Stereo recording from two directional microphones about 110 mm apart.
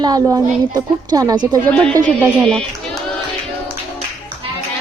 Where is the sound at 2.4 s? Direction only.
5° left (ahead or behind).